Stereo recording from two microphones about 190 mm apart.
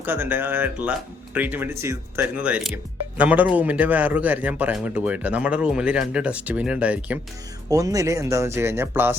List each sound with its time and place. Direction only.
0.0 s speech: 10° right (ahead or behind)
7.7 s speech: 20° right (ahead or behind)